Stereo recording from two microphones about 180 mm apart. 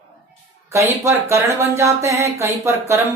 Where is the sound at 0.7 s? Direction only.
15° right (ahead or behind).